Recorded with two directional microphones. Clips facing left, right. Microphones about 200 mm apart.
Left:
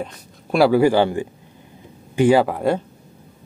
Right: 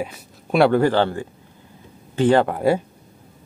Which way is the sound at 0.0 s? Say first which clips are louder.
Right 1 dB; 5° right (ahead or behind).